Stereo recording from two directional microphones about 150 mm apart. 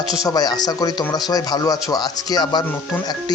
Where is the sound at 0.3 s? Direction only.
25° left (ahead or behind).